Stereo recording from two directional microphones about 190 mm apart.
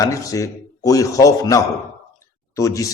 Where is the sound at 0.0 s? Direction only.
15° left (ahead or behind).